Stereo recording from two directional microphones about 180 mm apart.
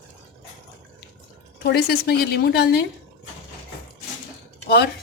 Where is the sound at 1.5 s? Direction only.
65° left (ahead or behind).